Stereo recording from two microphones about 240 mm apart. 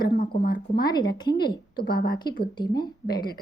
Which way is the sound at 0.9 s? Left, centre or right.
Centre.